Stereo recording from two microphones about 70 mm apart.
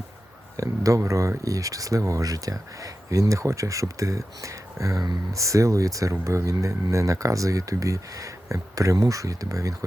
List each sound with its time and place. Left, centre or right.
0.5 s speech: right